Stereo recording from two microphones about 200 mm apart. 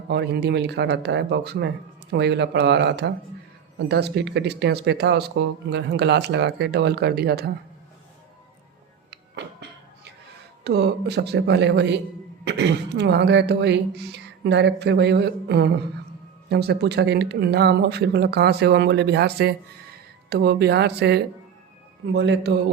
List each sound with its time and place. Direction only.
0.1 s speech: 55° right (ahead or behind)
9.0 s music: 55° right (ahead or behind)
10.6 s speech: 55° right (ahead or behind)